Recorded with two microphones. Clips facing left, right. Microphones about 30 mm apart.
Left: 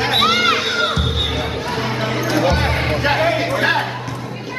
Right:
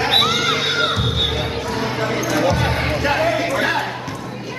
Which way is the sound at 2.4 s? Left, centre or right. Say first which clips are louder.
Left 1 dB; left.